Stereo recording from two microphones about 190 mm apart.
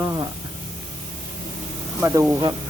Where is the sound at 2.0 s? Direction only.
15° right (ahead or behind).